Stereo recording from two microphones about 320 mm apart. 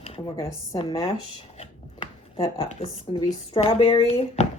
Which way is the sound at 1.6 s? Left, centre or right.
Centre.